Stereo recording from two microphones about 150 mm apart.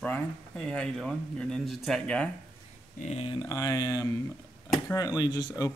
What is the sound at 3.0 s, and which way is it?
Speech, 45° left (ahead or behind).